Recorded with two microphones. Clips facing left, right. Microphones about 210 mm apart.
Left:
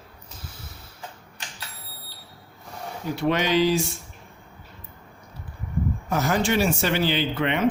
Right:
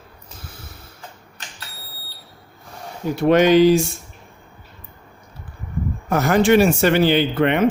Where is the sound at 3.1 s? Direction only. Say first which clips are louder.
Right 9 dB; 50° right (ahead or behind).